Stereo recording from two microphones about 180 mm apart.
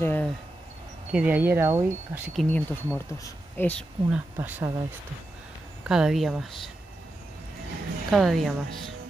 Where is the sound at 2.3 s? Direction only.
5° left (ahead or behind).